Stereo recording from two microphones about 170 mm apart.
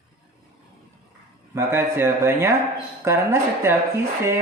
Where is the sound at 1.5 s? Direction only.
15° right (ahead or behind).